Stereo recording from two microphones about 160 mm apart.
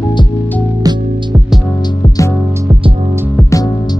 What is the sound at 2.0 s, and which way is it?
Music, 20° left (ahead or behind).